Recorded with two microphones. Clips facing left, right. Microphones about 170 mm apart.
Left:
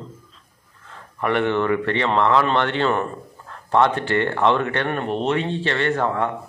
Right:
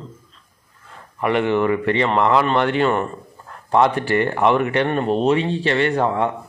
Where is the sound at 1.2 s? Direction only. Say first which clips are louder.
Right 2 dB; 10° right (ahead or behind).